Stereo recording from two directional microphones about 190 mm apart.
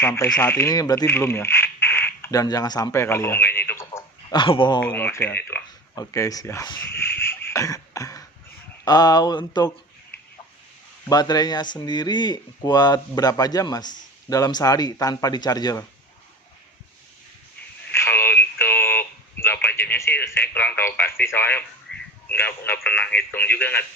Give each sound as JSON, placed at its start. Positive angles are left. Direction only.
{"t": 0.0, "sound": "speech", "side_deg": 15}
{"t": 4.8, "sound": "speech", "side_deg": 10}
{"t": 11.1, "sound": "speech", "side_deg": 20}
{"t": 17.9, "sound": "radio", "side_deg": 10}
{"t": 21.9, "sound": "a sound", "side_deg": 5}
{"t": 22.3, "sound": "speech", "side_deg": 10}